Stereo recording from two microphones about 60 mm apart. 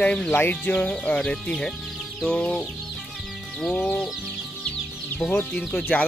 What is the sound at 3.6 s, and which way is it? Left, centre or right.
Speech, centre.